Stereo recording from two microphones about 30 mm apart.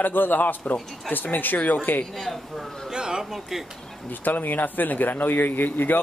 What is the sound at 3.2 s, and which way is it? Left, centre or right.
Speech, centre.